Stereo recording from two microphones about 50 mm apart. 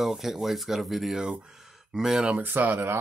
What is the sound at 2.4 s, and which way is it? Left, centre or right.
Speech, right.